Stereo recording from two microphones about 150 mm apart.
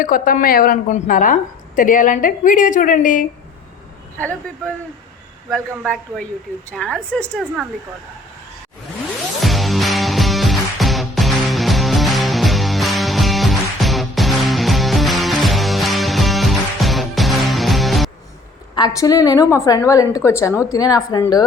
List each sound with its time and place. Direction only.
0.0 s a woman's voice: 65° left (ahead or behind)
4.2 s a woman's voice: 10° left (ahead or behind)
9.4 s music: centre (ahead or behind)
18.7 s a woman's voice: 25° left (ahead or behind)